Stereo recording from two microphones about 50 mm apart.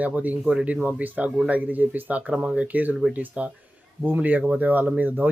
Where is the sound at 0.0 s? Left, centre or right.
Right.